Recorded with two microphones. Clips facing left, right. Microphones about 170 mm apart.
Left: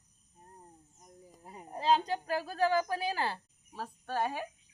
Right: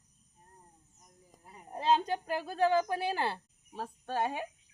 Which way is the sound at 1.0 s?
35° left (ahead or behind).